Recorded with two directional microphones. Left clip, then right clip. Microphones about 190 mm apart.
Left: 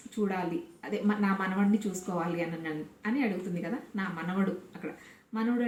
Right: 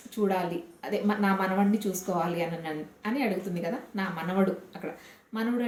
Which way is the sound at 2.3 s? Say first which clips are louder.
Right 3 dB; 10° right (ahead or behind).